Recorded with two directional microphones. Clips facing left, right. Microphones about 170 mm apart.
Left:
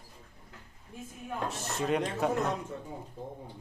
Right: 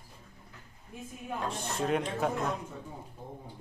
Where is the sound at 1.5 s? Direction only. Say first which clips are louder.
Even; centre (ahead or behind).